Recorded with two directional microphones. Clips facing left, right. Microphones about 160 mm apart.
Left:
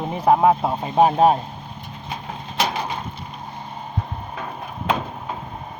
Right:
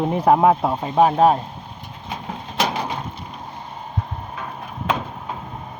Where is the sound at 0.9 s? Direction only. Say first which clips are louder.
Even; 20° left (ahead or behind).